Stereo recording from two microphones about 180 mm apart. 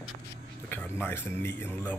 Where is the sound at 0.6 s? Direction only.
10° left (ahead or behind).